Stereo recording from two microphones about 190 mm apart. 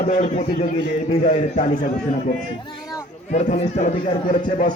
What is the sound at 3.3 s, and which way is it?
Speech, 35° left (ahead or behind).